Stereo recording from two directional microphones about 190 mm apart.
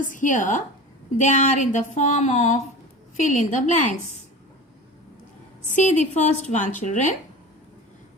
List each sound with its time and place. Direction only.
0.0 s a woman's voice: 45° left (ahead or behind)
5.7 s a woman's voice: 40° left (ahead or behind)